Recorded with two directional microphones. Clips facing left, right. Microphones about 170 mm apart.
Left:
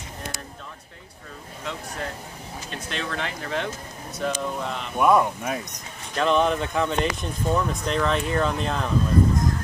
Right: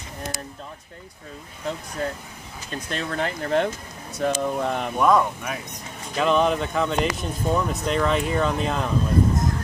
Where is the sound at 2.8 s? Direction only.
45° right (ahead or behind).